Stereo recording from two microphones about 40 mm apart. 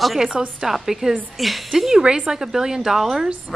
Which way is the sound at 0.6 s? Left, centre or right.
Centre.